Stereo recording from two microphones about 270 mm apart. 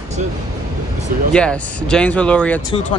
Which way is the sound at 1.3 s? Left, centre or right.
Centre.